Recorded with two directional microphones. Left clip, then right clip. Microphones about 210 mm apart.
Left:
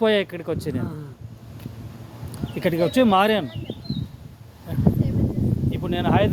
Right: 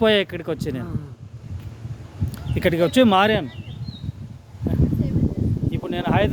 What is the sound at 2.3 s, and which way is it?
Speech, 30° right (ahead or behind).